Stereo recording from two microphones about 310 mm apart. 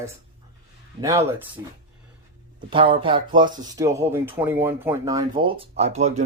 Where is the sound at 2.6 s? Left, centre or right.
Centre.